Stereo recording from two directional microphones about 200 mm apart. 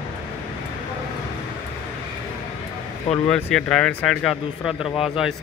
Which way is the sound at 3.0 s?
30° left (ahead or behind).